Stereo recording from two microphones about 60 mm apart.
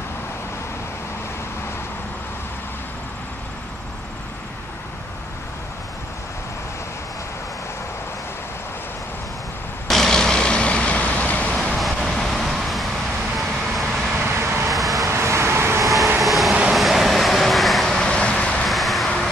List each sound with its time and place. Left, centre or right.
9.8 s vehicle: centre; by 11.5 s left
11.7 s vehicle: centre
14.1 s vehicle: right
14.7 s vehicle: centre
15.0 s vehicle: right
15.8 s vehicle: centre; by 18.7 s left
18.7 s vehicle: centre